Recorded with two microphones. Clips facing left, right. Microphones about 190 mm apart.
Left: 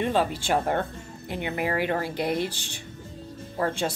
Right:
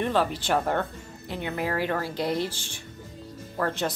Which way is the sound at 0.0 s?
15° left (ahead or behind).